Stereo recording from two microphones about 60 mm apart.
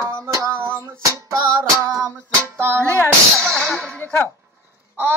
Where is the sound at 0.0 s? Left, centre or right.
Right.